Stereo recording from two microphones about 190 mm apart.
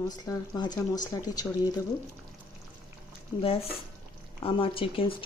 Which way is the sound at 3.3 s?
30° left (ahead or behind).